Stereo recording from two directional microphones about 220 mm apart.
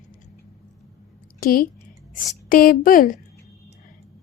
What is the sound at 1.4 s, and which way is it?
A woman's voice, 40° left (ahead or behind).